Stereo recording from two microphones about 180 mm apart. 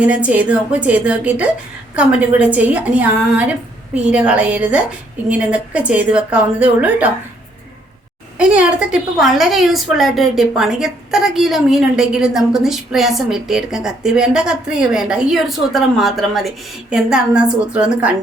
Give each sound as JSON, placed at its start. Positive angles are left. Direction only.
{"t": 0.0, "sound": "a woman's voice", "side_deg": -5}
{"t": 8.4, "sound": "a woman's voice", "side_deg": -5}